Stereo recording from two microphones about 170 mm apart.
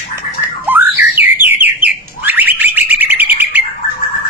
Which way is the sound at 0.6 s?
10° right (ahead or behind).